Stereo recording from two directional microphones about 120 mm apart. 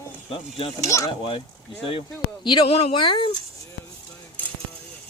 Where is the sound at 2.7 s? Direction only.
55° left (ahead or behind).